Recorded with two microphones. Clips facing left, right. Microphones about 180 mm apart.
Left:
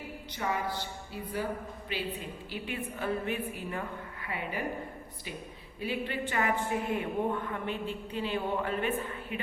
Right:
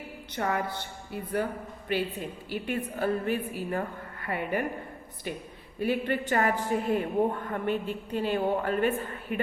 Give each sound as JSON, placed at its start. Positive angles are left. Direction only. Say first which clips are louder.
{"t": 0.3, "sound": "speech", "louder": "right 3 dB", "side_deg": -60}
{"t": 5.8, "sound": "speech", "louder": "right 6 dB", "side_deg": -45}